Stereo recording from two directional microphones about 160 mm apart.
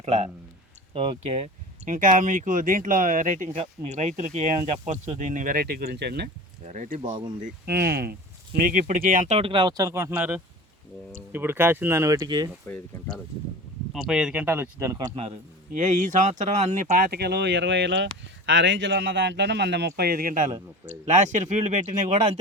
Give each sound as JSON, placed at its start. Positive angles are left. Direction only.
{"t": 0.0, "sound": "speech", "side_deg": -40}
{"t": 3.5, "sound": "speech", "side_deg": -40}
{"t": 6.7, "sound": "speech", "side_deg": -55}
{"t": 7.0, "sound": "speech", "side_deg": -30}
{"t": 7.7, "sound": "speech", "side_deg": -80}
{"t": 8.5, "sound": "speech", "side_deg": -60}
{"t": 12.6, "sound": "speech", "side_deg": 10}
{"t": 13.9, "sound": "speech", "side_deg": -5}
{"t": 15.7, "sound": "speech", "side_deg": -50}
{"t": 17.0, "sound": "speech", "side_deg": -85}